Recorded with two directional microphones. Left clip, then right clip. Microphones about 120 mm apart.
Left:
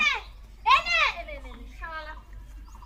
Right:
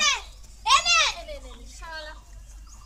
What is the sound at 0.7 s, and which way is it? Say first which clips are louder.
Children playing: right 2 dB; 25° right (ahead or behind).